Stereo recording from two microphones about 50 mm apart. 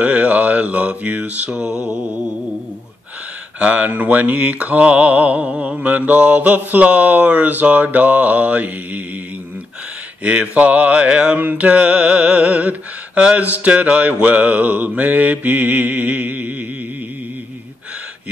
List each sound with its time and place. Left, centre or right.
0.0 s mantra: right
1.7 s mantra: left
3.5 s mantra: right
10.2 s mantra: right